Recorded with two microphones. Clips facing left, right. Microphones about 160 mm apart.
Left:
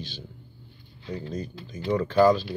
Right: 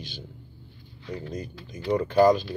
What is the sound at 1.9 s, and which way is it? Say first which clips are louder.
Speech: even; 15° right (ahead or behind).